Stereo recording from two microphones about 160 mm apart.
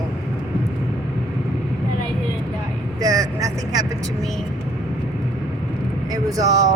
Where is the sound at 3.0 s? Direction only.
20° right (ahead or behind).